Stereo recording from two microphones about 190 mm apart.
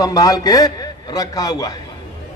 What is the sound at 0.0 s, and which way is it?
A man's voice, 20° left (ahead or behind).